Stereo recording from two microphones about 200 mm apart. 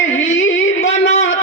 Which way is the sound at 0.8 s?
35° left (ahead or behind).